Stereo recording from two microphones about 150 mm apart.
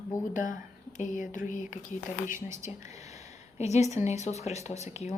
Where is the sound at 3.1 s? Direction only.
45° left (ahead or behind).